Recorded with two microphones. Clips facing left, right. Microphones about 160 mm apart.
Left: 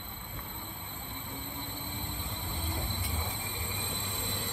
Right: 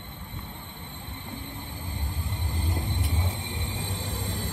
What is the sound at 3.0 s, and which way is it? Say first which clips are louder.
Music: right 5 dB; 90° right.